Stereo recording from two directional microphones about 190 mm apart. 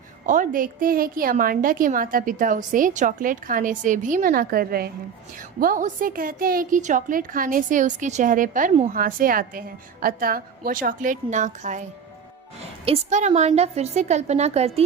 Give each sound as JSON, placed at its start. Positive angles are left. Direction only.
{"t": 0.3, "sound": "a woman's voice", "side_deg": -45}